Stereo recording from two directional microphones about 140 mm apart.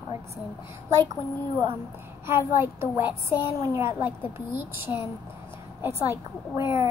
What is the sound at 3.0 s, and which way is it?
Speech, 35° left (ahead or behind).